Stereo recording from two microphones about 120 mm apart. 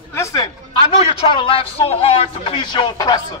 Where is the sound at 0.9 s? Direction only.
50° left (ahead or behind).